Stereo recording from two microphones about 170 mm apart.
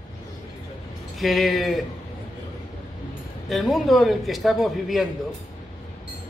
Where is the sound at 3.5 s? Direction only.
Centre (ahead or behind).